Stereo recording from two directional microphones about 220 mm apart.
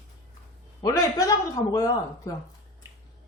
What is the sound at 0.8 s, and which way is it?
Speech, 15° left (ahead or behind).